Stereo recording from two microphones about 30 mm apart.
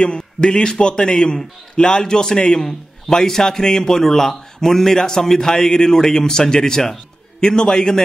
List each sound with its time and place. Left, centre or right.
0.0 s a man's voice: left; by 7.0 s centre
7.3 s a man's voice: left